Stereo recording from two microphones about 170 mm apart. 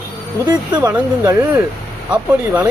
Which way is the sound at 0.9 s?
10° right (ahead or behind).